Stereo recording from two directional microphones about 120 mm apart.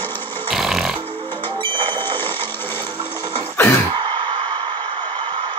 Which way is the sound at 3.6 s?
20° left (ahead or behind).